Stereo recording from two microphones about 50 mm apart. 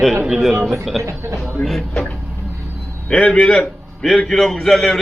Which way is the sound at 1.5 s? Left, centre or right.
Centre.